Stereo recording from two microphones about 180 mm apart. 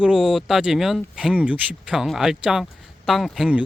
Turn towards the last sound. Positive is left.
turn(degrees=-5)  # may be behind; listen again after turning